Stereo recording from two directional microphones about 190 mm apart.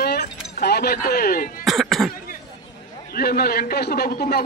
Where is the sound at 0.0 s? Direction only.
55° left (ahead or behind).